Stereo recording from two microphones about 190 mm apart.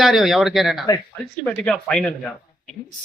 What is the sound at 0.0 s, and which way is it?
Speech, centre (ahead or behind).